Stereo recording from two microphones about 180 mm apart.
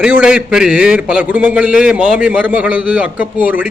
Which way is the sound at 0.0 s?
5° right (ahead or behind).